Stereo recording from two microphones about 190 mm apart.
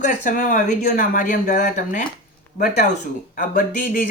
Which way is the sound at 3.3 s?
45° left (ahead or behind).